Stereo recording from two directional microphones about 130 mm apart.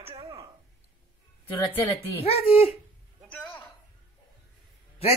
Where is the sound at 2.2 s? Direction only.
50° left (ahead or behind).